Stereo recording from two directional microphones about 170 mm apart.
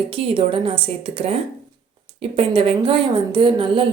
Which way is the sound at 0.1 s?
30° right (ahead or behind).